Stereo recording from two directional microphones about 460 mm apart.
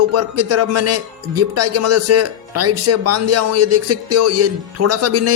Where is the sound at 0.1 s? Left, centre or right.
Right.